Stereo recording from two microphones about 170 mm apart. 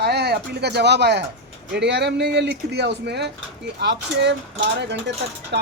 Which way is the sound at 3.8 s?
90° right.